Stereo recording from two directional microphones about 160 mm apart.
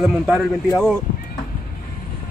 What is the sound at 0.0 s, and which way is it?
Speech, centre (ahead or behind).